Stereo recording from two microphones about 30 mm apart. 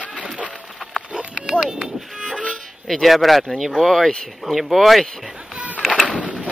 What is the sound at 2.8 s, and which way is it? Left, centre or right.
Speech, centre.